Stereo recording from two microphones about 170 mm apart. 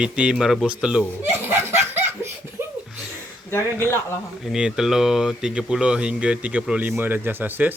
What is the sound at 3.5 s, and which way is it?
Speech, 15° left (ahead or behind).